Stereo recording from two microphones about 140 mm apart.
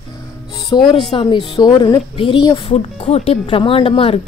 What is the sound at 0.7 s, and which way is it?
Speech, 30° left (ahead or behind).